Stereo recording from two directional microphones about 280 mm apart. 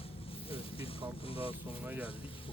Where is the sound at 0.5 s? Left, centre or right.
Centre.